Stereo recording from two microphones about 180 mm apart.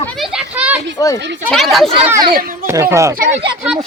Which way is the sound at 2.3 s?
55° right (ahead or behind).